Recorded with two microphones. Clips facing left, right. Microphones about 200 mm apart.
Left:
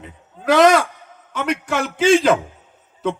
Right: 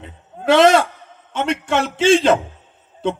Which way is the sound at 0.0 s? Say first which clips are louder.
Right 2 dB; 25° right (ahead or behind).